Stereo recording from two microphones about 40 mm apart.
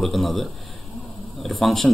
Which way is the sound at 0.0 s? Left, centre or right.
Centre.